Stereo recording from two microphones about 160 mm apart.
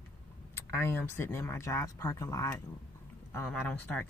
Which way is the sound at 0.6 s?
15° left (ahead or behind).